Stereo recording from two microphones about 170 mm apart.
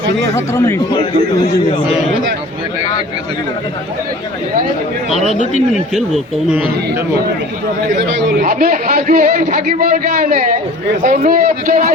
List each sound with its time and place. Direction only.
0.3 s speech: 15° left (ahead or behind)
5.9 s speech: centre (ahead or behind)
8.4 s a man's voice: 55° right (ahead or behind)